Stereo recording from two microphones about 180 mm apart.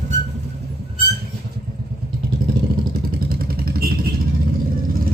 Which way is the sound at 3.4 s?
55° right (ahead or behind).